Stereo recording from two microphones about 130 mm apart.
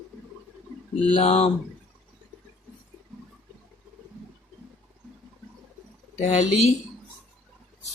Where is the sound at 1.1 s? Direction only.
50° left (ahead or behind).